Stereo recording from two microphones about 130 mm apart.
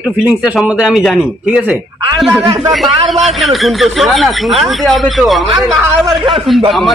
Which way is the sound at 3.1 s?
Centre (ahead or behind).